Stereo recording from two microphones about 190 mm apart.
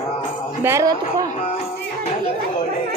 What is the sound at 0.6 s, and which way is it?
Music, 15° right (ahead or behind).